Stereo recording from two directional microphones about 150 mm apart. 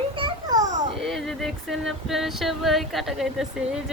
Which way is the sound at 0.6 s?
55° right (ahead or behind).